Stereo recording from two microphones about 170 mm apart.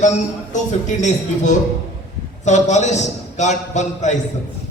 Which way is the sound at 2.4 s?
45° left (ahead or behind).